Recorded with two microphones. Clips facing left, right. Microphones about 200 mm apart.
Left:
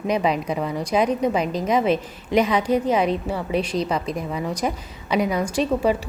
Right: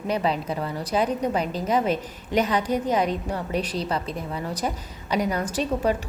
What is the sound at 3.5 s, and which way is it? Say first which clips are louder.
Speech: left 4 dB; 30° right (ahead or behind).